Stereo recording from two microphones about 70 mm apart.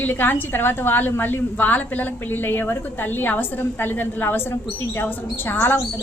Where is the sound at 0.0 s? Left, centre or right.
Left.